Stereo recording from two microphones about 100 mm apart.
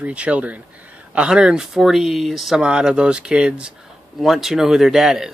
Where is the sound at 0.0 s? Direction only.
10° right (ahead or behind).